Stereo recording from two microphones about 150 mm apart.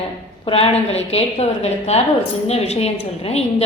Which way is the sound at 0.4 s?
40° left (ahead or behind).